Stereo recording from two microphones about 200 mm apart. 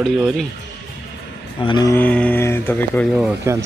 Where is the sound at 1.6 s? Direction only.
20° left (ahead or behind).